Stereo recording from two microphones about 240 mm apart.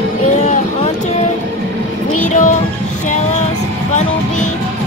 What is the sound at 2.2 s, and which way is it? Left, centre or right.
Music, left.